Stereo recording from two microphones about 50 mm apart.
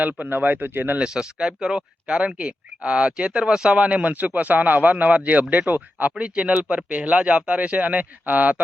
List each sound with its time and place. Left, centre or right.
0.0 s a man's voice: right
0.9 s a man's voice: centre; by 6.1 s right
6.1 s speech: right